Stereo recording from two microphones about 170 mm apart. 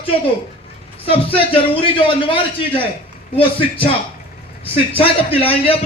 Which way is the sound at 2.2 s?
30° left (ahead or behind).